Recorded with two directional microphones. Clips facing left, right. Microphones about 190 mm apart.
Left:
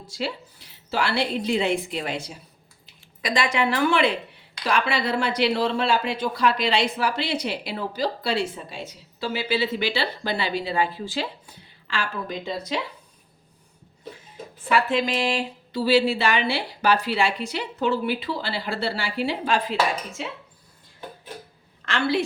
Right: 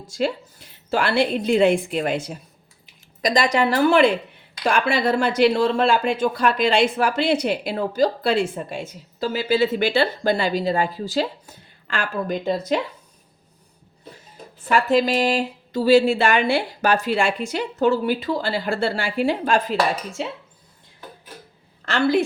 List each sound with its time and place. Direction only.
0.1 s speech: 45° right (ahead or behind)
3.2 s a woman's voice: 40° right (ahead or behind)
14.7 s speech: 40° right (ahead or behind)
21.8 s a woman's voice: 40° right (ahead or behind)